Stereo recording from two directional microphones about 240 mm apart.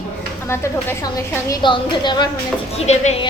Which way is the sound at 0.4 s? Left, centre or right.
Centre.